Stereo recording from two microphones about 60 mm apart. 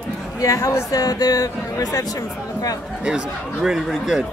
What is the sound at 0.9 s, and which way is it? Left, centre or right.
Speech, left.